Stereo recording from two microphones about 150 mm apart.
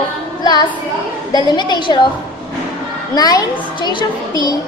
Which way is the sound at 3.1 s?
25° left (ahead or behind).